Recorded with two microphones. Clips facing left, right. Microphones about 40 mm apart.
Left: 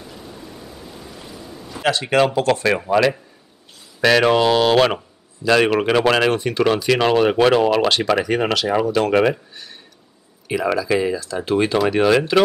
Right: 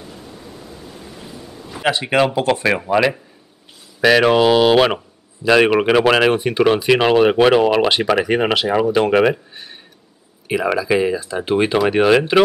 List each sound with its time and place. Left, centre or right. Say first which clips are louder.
1.2 s speech: right 1 dB; centre